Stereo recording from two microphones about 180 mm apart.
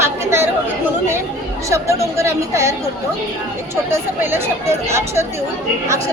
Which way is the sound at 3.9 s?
15° right (ahead or behind).